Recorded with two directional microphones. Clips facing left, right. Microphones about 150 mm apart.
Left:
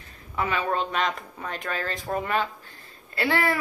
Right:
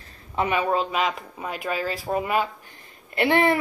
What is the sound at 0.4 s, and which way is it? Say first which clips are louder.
Speech: right 3 dB; 15° right (ahead or behind).